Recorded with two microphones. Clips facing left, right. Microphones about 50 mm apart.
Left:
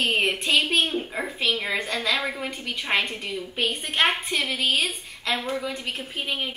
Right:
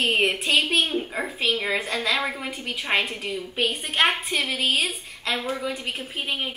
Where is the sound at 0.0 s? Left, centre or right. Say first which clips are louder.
Right 1 dB; centre.